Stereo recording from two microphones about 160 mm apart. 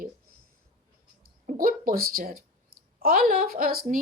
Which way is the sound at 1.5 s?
60° right (ahead or behind).